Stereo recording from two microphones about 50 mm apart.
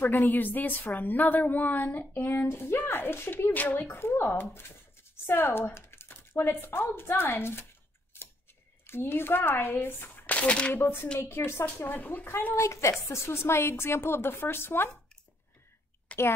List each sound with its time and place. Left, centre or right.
0.3 s a woman's voice: left
2.3 s speech: left
3.9 s speech: left
8.8 s speech: left
10.2 s speech: left
11.1 s a woman's voice: left
11.6 s a woman's voice: left
12.5 s a woman's voice: left
13.1 s a woman's voice: left
16.1 s a sound: left